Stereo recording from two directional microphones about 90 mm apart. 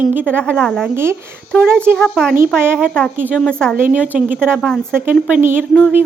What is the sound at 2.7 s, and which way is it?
Speech, 10° left (ahead or behind).